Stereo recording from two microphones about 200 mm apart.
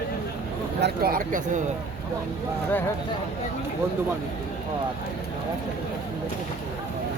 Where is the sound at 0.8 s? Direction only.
50° right (ahead or behind).